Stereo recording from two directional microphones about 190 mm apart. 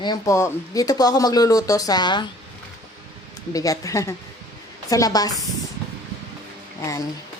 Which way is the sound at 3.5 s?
20° left (ahead or behind).